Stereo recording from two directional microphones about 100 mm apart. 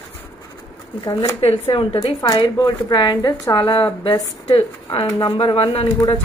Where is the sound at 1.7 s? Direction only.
45° left (ahead or behind).